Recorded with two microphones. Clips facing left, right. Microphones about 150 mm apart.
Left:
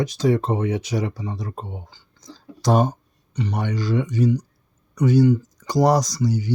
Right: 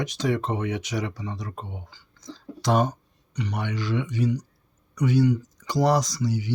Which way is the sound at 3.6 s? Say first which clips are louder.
Left 5 dB; 40° left (ahead or behind).